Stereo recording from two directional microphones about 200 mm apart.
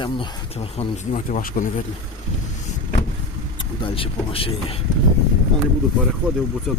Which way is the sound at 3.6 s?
25° left (ahead or behind).